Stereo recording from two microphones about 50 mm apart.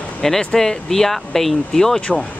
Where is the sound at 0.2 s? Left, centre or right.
Centre.